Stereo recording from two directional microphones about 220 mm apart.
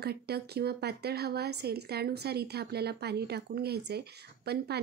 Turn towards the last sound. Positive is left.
turn(degrees=-45)  # may be behind; listen again after turning